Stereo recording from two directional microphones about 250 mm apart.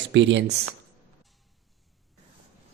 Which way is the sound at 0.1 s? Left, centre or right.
Right.